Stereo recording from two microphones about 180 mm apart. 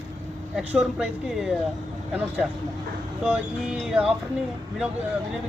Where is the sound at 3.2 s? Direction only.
5° right (ahead or behind).